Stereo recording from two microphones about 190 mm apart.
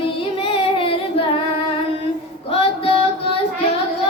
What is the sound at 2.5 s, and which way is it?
Music, 30° left (ahead or behind).